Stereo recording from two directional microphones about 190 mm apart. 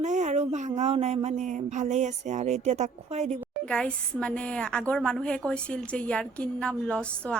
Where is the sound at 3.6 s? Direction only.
5° left (ahead or behind).